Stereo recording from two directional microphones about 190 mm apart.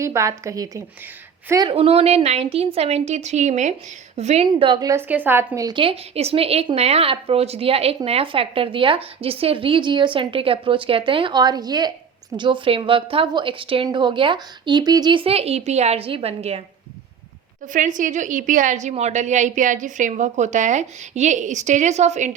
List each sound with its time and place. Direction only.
0.0 s a woman's voice: 15° right (ahead or behind)
1.7 s a woman's voice: 30° right (ahead or behind)
4.4 s a woman's voice: 25° right (ahead or behind)
17.7 s a woman's voice: 40° right (ahead or behind)